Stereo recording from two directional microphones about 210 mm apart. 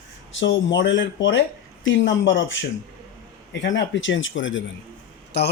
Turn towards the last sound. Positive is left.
turn(degrees=55)  # may be behind; listen again after turning